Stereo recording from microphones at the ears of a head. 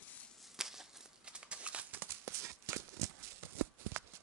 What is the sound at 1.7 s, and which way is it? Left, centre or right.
Horse, right.